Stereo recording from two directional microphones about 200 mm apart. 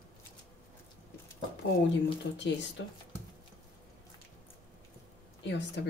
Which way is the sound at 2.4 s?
60° left (ahead or behind).